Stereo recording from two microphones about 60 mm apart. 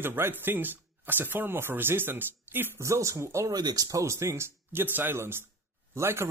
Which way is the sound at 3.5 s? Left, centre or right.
Right.